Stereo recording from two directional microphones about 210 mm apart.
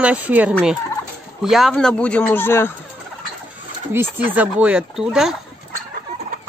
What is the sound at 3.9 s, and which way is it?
Speech, 10° right (ahead or behind).